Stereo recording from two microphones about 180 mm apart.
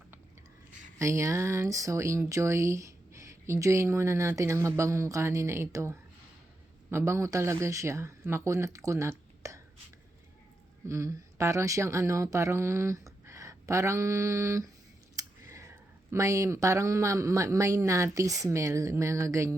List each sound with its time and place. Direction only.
0.9 s speech: 15° right (ahead or behind)
10.8 s speech: 15° right (ahead or behind)
15.1 s a sound: 20° right (ahead or behind)
16.0 s speech: 15° right (ahead or behind)